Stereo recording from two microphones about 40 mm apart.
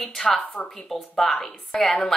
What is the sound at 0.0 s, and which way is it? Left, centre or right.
A woman's voice, centre.